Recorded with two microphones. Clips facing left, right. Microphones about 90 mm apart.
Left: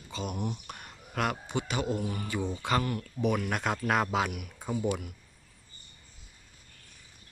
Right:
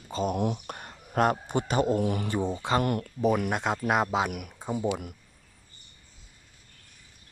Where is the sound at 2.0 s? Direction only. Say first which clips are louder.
Right 7 dB; 80° right.